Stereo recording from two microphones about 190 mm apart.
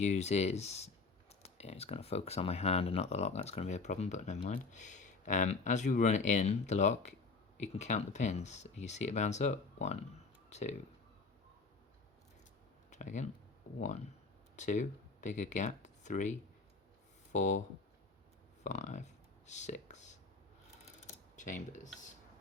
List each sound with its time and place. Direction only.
0.0 s speech: 35° left (ahead or behind)
12.9 s speech: 40° left (ahead or behind)
17.3 s speech: 40° left (ahead or behind)
18.6 s a sound: 35° left (ahead or behind)
20.8 s mechanisms: 40° left (ahead or behind)